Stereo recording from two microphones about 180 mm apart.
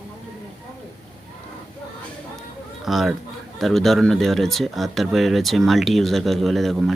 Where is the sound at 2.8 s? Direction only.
Centre (ahead or behind).